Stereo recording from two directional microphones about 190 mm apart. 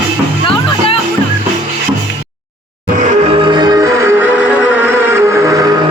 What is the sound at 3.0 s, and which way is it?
Music, 35° right (ahead or behind).